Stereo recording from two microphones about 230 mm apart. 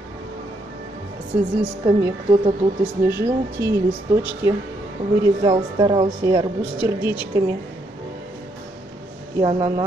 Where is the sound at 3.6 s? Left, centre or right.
Centre.